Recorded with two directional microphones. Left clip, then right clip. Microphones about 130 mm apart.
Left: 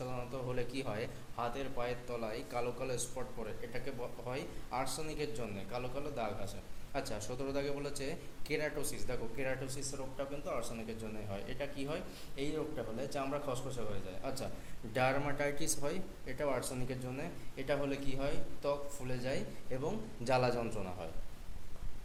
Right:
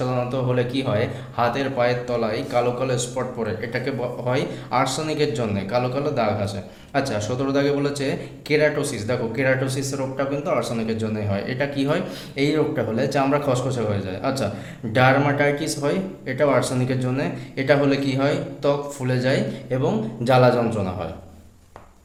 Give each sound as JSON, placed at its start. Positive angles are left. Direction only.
{"t": 0.5, "sound": "a man's voice", "side_deg": 65}
{"t": 1.4, "sound": "a man's voice", "side_deg": 40}
{"t": 10.2, "sound": "a man's voice", "side_deg": 30}
{"t": 14.9, "sound": "a man's voice", "side_deg": 50}
{"t": 19.7, "sound": "a man's voice", "side_deg": 55}